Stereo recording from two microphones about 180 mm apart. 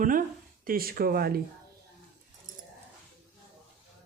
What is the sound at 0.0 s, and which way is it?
Speech, 50° right (ahead or behind).